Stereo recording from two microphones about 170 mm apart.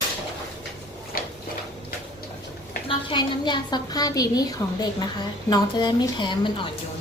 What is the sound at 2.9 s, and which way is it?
A woman's voice, 30° left (ahead or behind).